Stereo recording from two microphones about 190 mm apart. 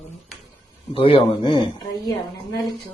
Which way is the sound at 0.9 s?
30° left (ahead or behind).